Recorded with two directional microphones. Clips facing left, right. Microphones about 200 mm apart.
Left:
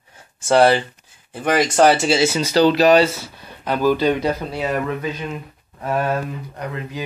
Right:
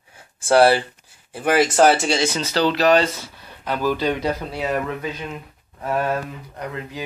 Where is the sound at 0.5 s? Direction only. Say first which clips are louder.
Even; 5° right (ahead or behind); by 3.1 s 10° left (ahead or behind).